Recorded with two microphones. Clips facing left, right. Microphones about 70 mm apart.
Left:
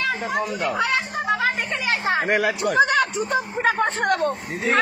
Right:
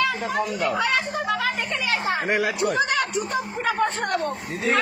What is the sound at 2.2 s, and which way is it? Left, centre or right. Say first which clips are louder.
Speech: left 2 dB; left.